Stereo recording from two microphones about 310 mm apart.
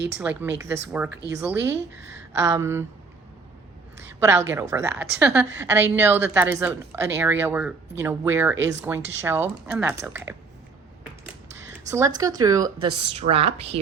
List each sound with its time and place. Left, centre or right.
0.2 s a woman's voice: centre
4.2 s a woman's voice: centre
11.9 s a woman's voice: centre